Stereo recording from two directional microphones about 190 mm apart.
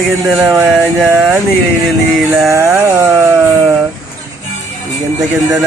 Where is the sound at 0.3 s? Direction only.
5° right (ahead or behind).